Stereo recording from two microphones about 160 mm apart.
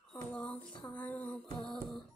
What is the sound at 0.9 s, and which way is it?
Music, 10° left (ahead or behind).